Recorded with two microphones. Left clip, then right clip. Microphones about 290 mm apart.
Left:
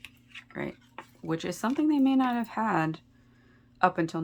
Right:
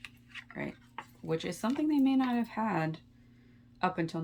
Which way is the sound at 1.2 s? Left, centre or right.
Centre.